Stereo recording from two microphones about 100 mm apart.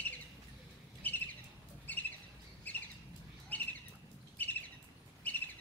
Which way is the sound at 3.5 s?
15° left (ahead or behind).